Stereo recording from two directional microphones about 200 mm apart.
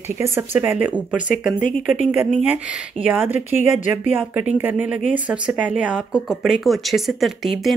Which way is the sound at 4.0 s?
10° right (ahead or behind).